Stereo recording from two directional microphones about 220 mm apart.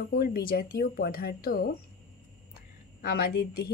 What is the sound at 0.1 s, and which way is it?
Speech, 45° left (ahead or behind).